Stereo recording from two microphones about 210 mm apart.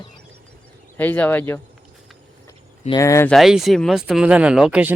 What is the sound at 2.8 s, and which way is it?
Speech, 15° left (ahead or behind).